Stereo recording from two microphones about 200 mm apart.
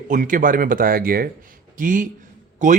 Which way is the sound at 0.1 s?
40° right (ahead or behind).